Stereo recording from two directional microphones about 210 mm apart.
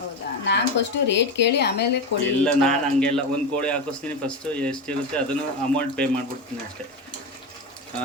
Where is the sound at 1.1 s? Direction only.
55° left (ahead or behind).